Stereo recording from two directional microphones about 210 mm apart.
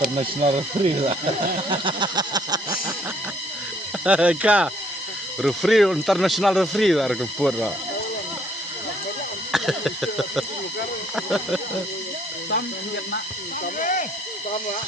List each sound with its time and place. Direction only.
0.2 s a sound: 30° right (ahead or behind)
4.0 s speech: 5° right (ahead or behind)
9.5 s speech: centre (ahead or behind)
13.7 s speech: 40° left (ahead or behind)